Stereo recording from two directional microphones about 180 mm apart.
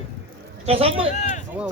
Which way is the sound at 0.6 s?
35° right (ahead or behind).